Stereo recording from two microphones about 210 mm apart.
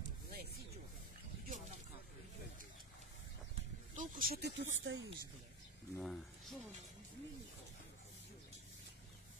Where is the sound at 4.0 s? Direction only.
45° right (ahead or behind).